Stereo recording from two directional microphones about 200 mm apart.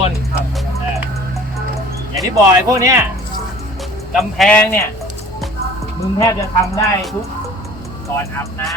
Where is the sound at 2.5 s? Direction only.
15° right (ahead or behind).